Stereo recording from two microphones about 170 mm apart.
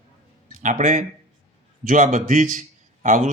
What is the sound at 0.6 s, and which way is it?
A man's voice, 45° right (ahead or behind).